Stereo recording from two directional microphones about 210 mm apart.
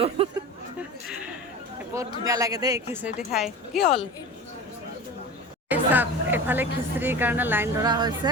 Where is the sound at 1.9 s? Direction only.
15° right (ahead or behind).